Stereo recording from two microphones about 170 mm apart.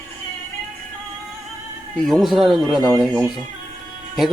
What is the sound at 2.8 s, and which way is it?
Speech, 25° right (ahead or behind).